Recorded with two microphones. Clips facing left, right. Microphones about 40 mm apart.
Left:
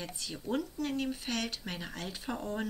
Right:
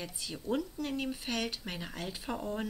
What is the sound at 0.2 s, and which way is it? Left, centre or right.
Speech, centre.